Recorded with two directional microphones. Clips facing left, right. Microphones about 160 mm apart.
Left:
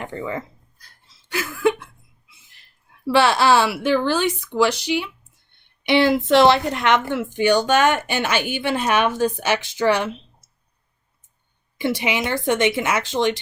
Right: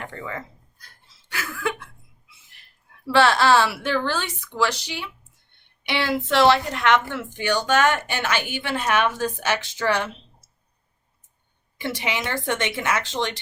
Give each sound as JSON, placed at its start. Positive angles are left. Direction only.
{"t": 0.0, "sound": "speech", "side_deg": 20}
{"t": 3.1, "sound": "speech", "side_deg": 15}
{"t": 11.8, "sound": "speech", "side_deg": 15}